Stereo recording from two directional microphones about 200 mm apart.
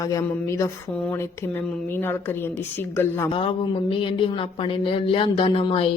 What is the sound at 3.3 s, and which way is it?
Speech, 25° left (ahead or behind).